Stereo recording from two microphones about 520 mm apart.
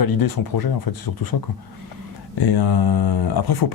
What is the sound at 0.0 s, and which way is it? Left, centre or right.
Speech, left.